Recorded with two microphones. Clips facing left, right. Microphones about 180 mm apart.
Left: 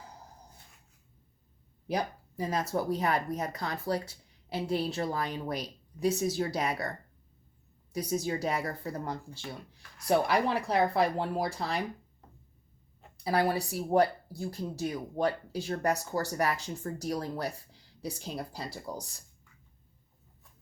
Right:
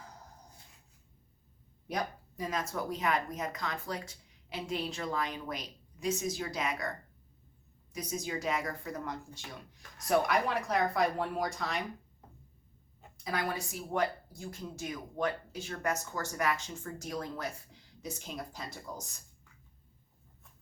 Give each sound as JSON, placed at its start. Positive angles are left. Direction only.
{"t": 1.9, "sound": "speech", "side_deg": 30}
{"t": 7.9, "sound": "speech", "side_deg": 35}
{"t": 13.2, "sound": "speech", "side_deg": 35}